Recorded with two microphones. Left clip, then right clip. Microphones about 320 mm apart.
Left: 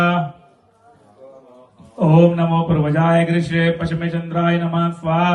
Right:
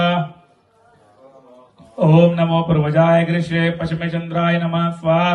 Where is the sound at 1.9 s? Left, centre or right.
Right.